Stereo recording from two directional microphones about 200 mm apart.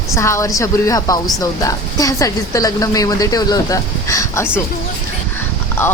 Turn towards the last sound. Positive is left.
turn(degrees=10)  # may be behind; listen again after turning